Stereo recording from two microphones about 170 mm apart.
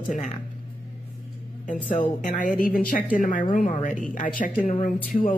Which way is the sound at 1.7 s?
50° left (ahead or behind).